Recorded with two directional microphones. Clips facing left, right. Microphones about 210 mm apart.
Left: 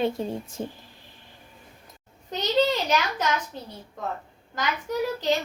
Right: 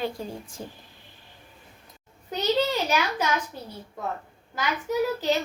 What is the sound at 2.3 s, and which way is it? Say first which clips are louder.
Speech: left 1 dB; 10° right (ahead or behind).